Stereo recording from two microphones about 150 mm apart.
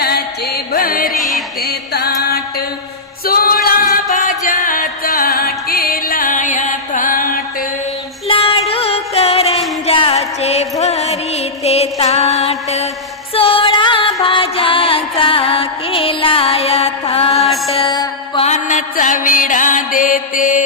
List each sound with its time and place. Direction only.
0.0 s music: 90° left; by 1.1 s 70° left (ahead or behind)
1.1 s music: centre (ahead or behind)
1.9 s music: 90° left; by 7.4 s 65° left (ahead or behind)
8.3 s music: 40° left (ahead or behind)
11.6 s mantra: 45° left (ahead or behind)
13.3 s music: 40° left (ahead or behind)
17.8 s music: 25° left (ahead or behind)
18.4 s mantra: 50° left (ahead or behind)